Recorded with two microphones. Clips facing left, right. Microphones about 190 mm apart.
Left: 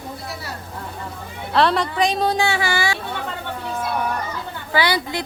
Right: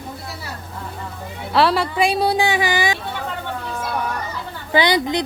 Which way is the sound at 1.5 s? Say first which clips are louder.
Right 1 dB; 5° right (ahead or behind).